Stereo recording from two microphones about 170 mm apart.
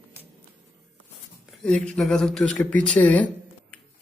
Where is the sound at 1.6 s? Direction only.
5° left (ahead or behind).